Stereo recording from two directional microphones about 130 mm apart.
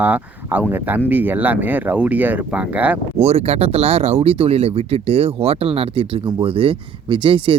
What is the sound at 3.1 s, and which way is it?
Speech, 55° right (ahead or behind).